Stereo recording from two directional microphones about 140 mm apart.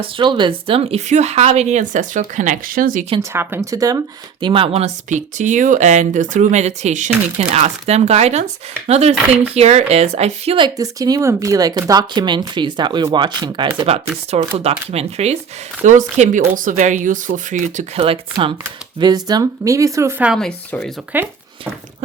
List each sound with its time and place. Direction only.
0.0 s speech: 35° right (ahead or behind); by 3.1 s 85° right
3.2 s speech: 20° right (ahead or behind); by 10.6 s 50° right (ahead or behind)
10.6 s speech: 25° right (ahead or behind)
13.7 s speech: 45° right (ahead or behind)
15.8 s speech: 60° right (ahead or behind)
16.6 s speech: 70° right (ahead or behind)
17.9 s speech: 45° right (ahead or behind)
18.9 s speech: 30° right (ahead or behind)
20.2 s speech: centre (ahead or behind)
21.1 s speech: 15° right (ahead or behind)